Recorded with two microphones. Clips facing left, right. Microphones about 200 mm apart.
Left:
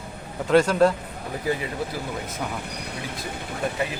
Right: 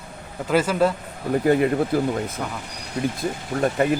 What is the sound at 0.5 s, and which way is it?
Speech, 5° right (ahead or behind).